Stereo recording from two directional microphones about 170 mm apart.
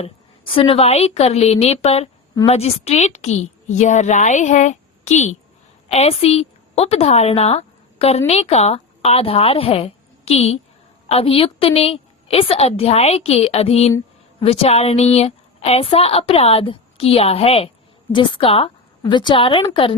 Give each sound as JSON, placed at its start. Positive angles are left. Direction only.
{"t": 0.0, "sound": "a woman's voice", "side_deg": 35}